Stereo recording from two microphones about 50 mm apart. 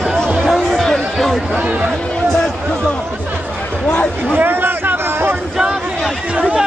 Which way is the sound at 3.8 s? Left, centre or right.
Centre.